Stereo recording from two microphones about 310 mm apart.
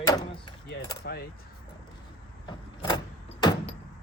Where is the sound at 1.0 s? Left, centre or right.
Left.